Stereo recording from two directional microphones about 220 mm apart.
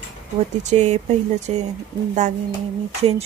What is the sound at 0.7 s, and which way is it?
Speech, 30° right (ahead or behind).